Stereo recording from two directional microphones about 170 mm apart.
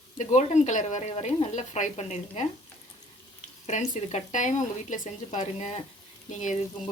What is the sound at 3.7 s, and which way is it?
Speech, 45° left (ahead or behind).